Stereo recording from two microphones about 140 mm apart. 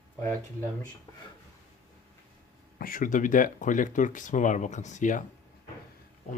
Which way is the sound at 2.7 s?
85° left.